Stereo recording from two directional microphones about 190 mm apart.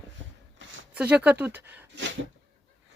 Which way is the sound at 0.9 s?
5° right (ahead or behind).